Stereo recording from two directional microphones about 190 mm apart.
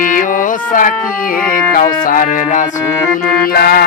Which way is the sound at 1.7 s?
45° left (ahead or behind).